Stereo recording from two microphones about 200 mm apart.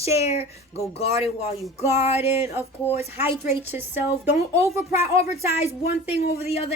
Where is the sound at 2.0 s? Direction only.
30° left (ahead or behind).